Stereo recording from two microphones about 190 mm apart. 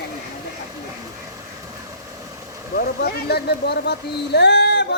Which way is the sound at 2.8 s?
55° left (ahead or behind).